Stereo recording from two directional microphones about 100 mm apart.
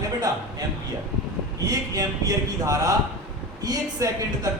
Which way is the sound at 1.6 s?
35° right (ahead or behind).